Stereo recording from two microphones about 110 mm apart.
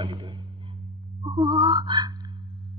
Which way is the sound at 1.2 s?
45° right (ahead or behind).